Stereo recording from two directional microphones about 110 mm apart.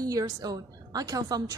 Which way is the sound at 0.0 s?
30° right (ahead or behind).